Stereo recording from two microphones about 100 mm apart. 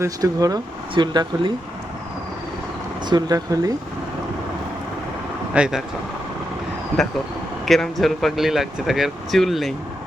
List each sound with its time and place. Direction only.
0.0 s speech: 35° right (ahead or behind)
0.9 s speech: 50° right (ahead or behind)
3.1 s speech: 40° right (ahead or behind)
5.5 s speech: 10° right (ahead or behind)
7.0 s speech: 5° left (ahead or behind)